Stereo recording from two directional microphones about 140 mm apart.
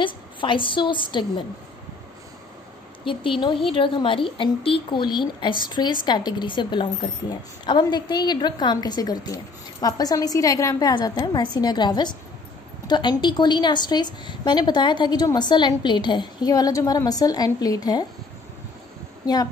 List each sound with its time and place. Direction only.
0.0 s a woman's voice: 35° left (ahead or behind)
3.1 s a woman's voice: 35° left (ahead or behind)